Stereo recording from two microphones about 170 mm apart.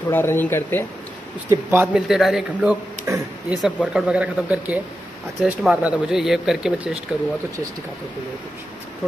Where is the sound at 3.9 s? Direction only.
5° right (ahead or behind).